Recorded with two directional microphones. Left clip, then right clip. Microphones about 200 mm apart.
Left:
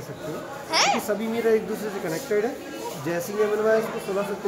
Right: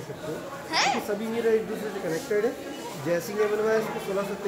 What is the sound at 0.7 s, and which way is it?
Speech, 50° left (ahead or behind).